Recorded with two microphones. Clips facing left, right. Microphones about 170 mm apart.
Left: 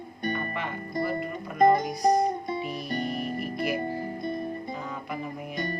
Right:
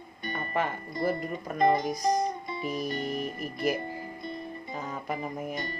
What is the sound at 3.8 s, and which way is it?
Music, 45° left (ahead or behind).